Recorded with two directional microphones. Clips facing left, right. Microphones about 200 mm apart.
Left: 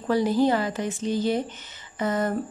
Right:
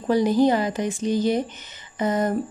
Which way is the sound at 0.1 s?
15° right (ahead or behind).